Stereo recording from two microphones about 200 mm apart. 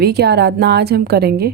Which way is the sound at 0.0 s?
55° right (ahead or behind).